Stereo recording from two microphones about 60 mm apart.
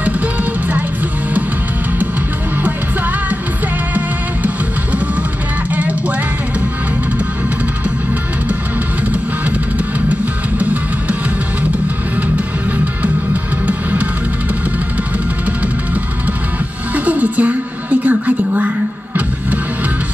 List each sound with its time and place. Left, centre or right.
0.0 s music: right
2.5 s music: right
5.7 s music: right
9.1 s music: right
15.4 s music: right